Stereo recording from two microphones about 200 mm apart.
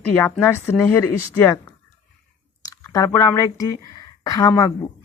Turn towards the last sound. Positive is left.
turn(degrees=20)  # may be behind; listen again after turning